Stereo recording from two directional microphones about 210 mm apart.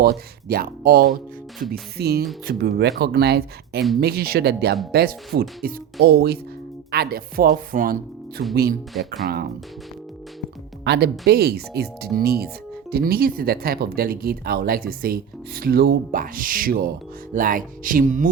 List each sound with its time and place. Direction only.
0.0 s speech: 45° right (ahead or behind)
1.5 s music: centre (ahead or behind)
2.0 s speech: 50° right (ahead or behind)
10.8 s speech: 50° right (ahead or behind)